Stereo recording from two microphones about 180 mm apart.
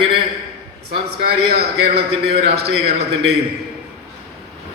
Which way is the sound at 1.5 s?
65° right (ahead or behind).